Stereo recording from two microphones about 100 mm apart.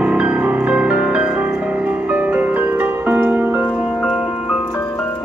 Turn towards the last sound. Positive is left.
turn(degrees=-15)  # may be behind; listen again after turning